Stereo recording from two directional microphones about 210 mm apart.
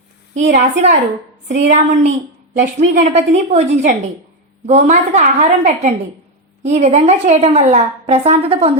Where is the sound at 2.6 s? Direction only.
35° right (ahead or behind).